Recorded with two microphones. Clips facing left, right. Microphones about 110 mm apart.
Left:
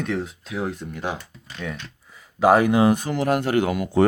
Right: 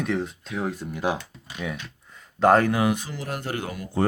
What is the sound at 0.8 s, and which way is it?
Speech, 10° right (ahead or behind).